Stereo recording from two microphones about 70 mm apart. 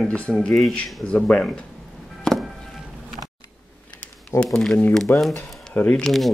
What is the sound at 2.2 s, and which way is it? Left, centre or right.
Chop, centre.